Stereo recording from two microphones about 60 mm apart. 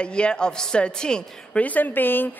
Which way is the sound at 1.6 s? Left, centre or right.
Left.